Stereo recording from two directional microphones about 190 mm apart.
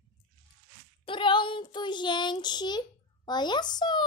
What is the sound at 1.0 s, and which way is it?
Speech, 25° left (ahead or behind).